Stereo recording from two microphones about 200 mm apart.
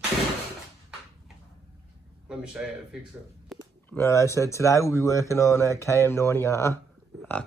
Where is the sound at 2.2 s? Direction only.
5° right (ahead or behind).